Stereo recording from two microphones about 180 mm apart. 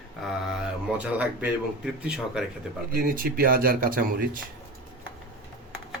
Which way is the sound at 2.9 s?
50° right (ahead or behind).